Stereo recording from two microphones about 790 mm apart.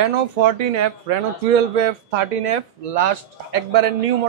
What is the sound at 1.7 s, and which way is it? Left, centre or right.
Speech, right.